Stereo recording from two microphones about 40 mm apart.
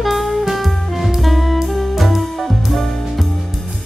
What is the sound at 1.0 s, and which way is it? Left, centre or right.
Music, centre.